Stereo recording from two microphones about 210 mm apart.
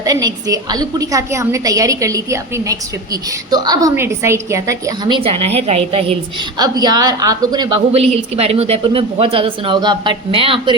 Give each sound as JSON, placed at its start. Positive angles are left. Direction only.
{"t": 0.0, "sound": "a woman's voice", "side_deg": -15}